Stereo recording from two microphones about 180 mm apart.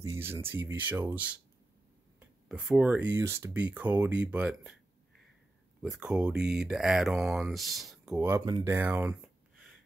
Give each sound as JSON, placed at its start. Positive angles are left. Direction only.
{"t": 0.0, "sound": "speech", "side_deg": -15}
{"t": 5.8, "sound": "speech", "side_deg": -5}
{"t": 8.4, "sound": "speech", "side_deg": -20}
{"t": 8.7, "sound": "speech", "side_deg": -10}